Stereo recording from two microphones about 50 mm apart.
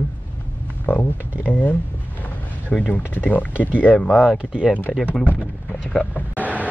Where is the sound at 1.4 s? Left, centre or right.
Left.